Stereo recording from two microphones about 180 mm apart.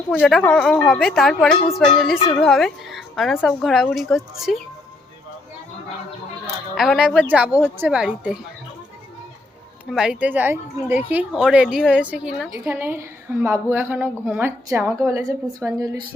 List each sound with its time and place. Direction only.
0.1 s speech: 5° left (ahead or behind)
6.7 s a woman's voice: centre (ahead or behind)
9.9 s a woman's voice: 5° right (ahead or behind)